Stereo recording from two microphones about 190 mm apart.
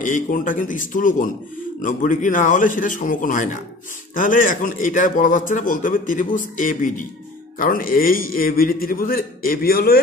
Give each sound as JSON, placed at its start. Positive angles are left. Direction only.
{"t": 0.0, "sound": "a man's voice", "side_deg": 45}